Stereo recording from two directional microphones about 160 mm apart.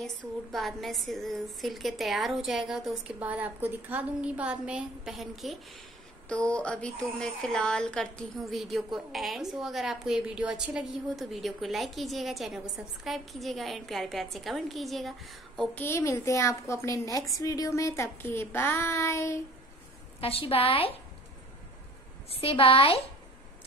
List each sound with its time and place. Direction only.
0.0 s a woman's voice: centre (ahead or behind); by 19.4 s 15° left (ahead or behind)
20.2 s a woman's voice: 35° left (ahead or behind)
22.4 s a woman's voice: 35° left (ahead or behind)